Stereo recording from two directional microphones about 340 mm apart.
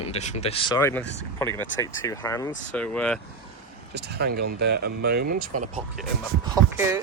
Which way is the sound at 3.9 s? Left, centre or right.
Right.